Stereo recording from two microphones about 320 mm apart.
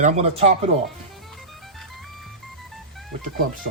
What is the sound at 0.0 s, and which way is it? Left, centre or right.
Speech, right.